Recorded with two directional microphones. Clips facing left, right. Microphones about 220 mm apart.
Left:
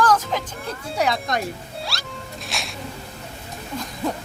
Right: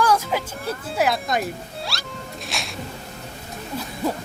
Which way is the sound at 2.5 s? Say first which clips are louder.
Even; centre (ahead or behind).